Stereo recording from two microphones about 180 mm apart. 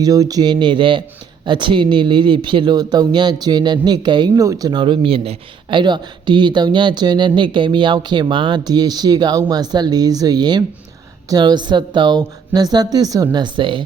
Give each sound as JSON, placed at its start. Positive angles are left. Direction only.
{"t": 0.0, "sound": "speech", "side_deg": -20}